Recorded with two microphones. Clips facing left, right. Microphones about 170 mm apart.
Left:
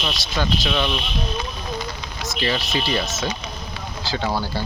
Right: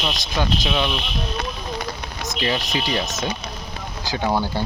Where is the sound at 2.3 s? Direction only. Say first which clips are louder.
Even; 15° right (ahead or behind).